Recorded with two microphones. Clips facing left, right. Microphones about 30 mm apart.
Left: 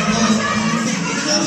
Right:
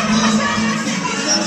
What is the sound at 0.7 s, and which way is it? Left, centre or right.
Music, right.